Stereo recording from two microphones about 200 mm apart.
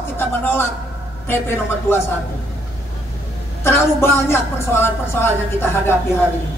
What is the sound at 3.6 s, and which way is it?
A woman's voice, 15° left (ahead or behind).